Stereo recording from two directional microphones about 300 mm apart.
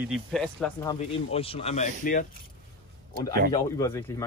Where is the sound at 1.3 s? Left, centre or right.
Centre.